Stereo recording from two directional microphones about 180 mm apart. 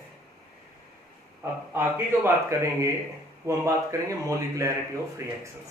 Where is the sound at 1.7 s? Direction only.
15° right (ahead or behind).